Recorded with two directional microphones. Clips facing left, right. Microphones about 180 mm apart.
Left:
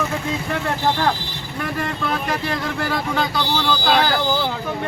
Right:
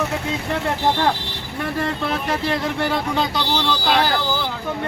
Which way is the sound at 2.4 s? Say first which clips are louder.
Right 2 dB; 25° right (ahead or behind).